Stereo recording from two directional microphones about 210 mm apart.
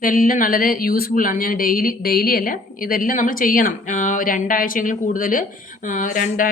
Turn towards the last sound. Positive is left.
turn(degrees=40)  # may be behind; listen again after turning